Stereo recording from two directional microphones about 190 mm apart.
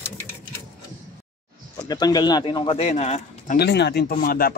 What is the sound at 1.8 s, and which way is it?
Speech, 20° left (ahead or behind).